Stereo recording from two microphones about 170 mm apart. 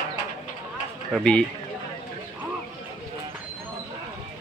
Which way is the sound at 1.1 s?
5° left (ahead or behind).